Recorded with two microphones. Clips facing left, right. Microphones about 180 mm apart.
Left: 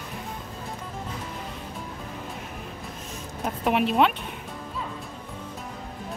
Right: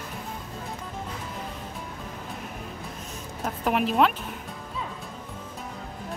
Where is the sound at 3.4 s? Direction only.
Centre (ahead or behind).